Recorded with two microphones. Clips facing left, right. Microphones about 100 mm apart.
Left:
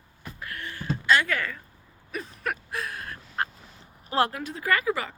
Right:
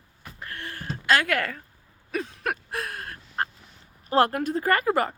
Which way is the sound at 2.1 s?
75° right (ahead or behind).